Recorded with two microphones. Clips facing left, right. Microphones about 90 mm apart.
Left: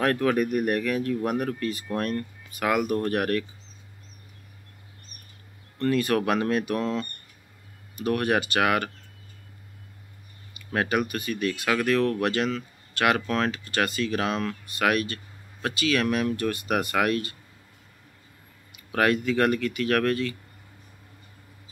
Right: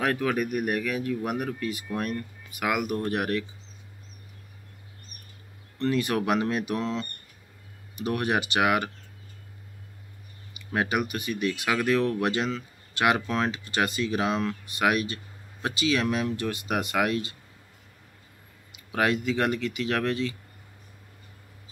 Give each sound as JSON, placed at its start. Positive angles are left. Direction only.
{"t": 0.0, "sound": "speech", "side_deg": -5}
{"t": 5.8, "sound": "speech", "side_deg": -15}
{"t": 8.0, "sound": "speech", "side_deg": -10}
{"t": 10.7, "sound": "speech", "side_deg": -10}
{"t": 18.9, "sound": "speech", "side_deg": -15}